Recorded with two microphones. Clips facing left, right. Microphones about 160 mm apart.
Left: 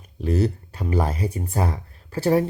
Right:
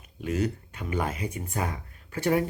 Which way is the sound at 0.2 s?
35° left (ahead or behind).